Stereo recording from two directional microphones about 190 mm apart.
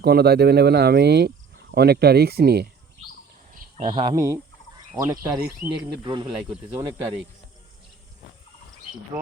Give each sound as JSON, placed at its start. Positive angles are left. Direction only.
{"t": 0.0, "sound": "speech", "side_deg": -55}
{"t": 3.8, "sound": "speech", "side_deg": -25}